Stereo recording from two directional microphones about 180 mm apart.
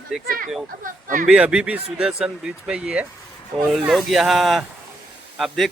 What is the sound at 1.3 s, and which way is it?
Speech, 5° right (ahead or behind).